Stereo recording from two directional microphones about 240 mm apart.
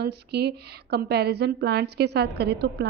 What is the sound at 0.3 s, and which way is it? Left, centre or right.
A woman's voice, right.